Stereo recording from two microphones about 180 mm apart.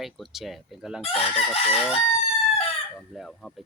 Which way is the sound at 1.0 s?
30° left (ahead or behind).